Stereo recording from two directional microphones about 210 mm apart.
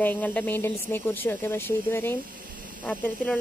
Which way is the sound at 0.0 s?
10° left (ahead or behind).